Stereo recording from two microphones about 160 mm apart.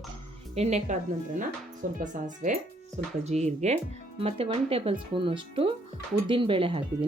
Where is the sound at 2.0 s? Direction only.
55° right (ahead or behind).